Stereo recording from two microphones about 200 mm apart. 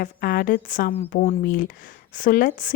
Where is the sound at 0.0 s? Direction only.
45° left (ahead or behind).